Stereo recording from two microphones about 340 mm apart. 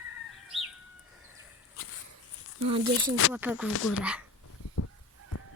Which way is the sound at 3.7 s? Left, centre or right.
Left.